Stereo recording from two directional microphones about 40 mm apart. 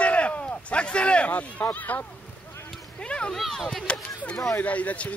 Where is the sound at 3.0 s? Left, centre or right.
Left.